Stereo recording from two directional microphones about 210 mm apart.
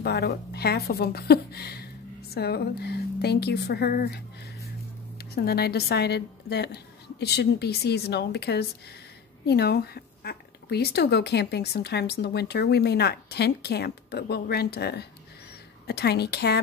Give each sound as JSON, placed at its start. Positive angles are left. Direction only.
{"t": 0.0, "sound": "speech", "side_deg": 50}